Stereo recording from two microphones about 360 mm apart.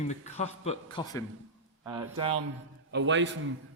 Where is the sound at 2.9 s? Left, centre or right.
Right.